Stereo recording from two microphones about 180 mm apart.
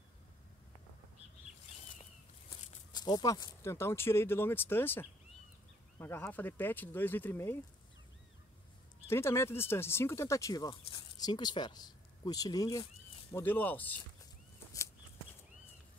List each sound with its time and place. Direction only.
2.9 s speech: 25° left (ahead or behind)
9.0 s speech: 15° left (ahead or behind)